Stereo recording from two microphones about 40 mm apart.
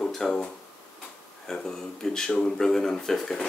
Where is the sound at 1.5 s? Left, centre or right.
Centre.